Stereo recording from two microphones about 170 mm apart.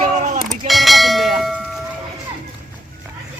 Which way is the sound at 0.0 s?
45° right (ahead or behind).